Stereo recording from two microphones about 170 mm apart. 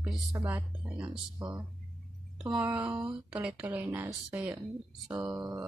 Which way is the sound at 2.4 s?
5° right (ahead or behind).